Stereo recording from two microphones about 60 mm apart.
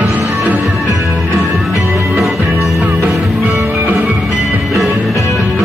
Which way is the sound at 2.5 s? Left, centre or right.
Right.